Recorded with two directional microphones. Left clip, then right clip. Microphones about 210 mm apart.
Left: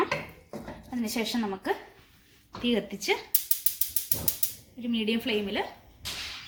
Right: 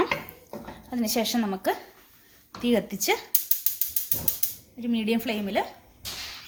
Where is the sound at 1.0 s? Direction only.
50° right (ahead or behind).